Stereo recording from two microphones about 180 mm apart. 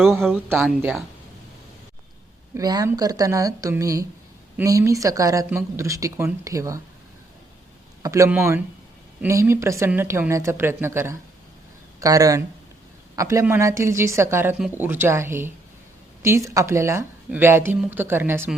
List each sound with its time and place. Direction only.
0.0 s speech: centre (ahead or behind)
2.6 s speech: 20° right (ahead or behind)
8.0 s speech: 20° right (ahead or behind)